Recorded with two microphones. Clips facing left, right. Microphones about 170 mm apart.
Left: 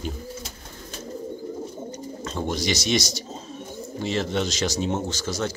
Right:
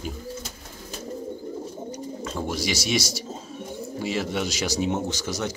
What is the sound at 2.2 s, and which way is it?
Speech, 5° right (ahead or behind).